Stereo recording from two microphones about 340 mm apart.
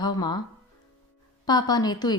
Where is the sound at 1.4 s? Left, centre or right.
Centre.